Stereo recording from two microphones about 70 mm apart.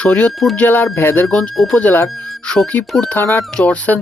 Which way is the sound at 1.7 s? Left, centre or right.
Left.